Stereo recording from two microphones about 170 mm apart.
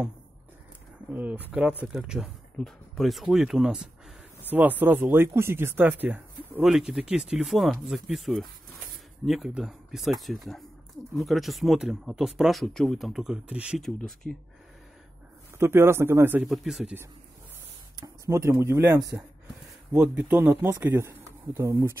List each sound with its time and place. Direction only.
1.1 s speech: 10° right (ahead or behind)
15.6 s speech: 15° right (ahead or behind)
16.4 s speech: centre (ahead or behind)
18.0 s speech: 20° right (ahead or behind)
19.9 s speech: 10° right (ahead or behind)